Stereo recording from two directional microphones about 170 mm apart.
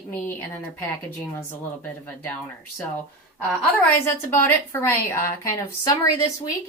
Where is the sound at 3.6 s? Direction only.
10° left (ahead or behind).